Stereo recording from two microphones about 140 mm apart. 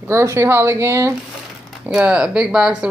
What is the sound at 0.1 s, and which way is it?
Speech, 20° right (ahead or behind).